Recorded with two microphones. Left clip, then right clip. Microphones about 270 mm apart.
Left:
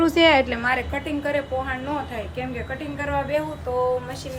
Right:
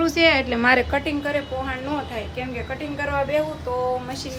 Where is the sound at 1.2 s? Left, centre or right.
Centre.